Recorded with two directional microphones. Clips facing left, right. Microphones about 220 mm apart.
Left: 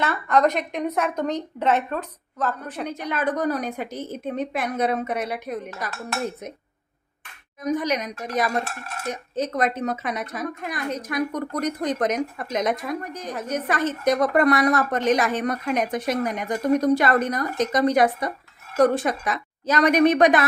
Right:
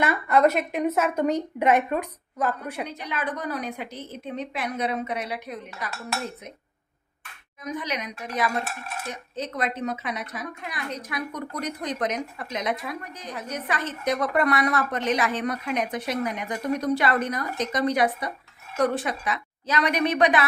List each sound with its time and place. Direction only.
0.0 s a woman's voice: 10° right (ahead or behind)
2.8 s a woman's voice: 45° left (ahead or behind)
7.8 s a woman's voice: 45° left (ahead or behind)